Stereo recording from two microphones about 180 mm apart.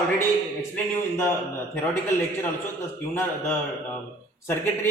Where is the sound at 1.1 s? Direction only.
10° left (ahead or behind).